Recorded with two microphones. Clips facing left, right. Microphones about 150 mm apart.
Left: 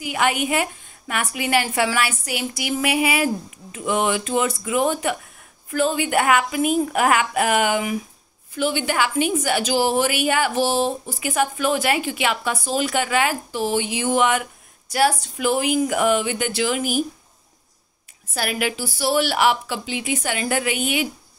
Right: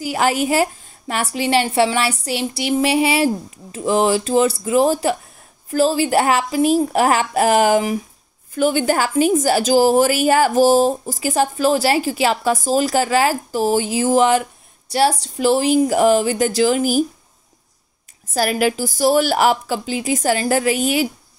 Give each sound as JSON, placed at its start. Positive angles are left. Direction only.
{"t": 0.0, "sound": "a woman's voice", "side_deg": -35}
{"t": 18.3, "sound": "a woman's voice", "side_deg": -40}